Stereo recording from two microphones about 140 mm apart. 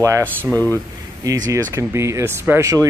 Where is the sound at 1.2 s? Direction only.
25° right (ahead or behind).